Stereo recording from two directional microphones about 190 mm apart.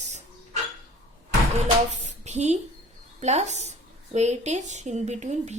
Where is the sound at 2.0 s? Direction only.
35° right (ahead or behind).